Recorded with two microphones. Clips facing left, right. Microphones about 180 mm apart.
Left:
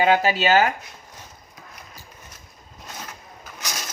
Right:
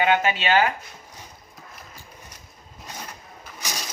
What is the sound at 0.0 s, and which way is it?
Speech, 35° left (ahead or behind).